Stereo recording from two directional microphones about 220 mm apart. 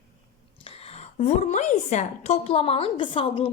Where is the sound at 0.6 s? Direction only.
30° left (ahead or behind).